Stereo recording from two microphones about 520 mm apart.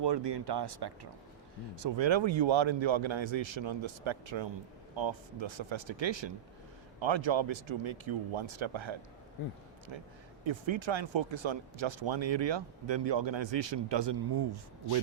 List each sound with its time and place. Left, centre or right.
0.0 s speech: right